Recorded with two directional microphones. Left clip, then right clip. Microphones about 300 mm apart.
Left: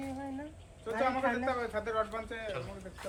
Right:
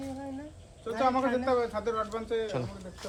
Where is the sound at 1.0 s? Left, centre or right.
Right.